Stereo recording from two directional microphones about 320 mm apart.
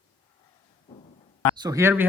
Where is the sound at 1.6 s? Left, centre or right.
Centre.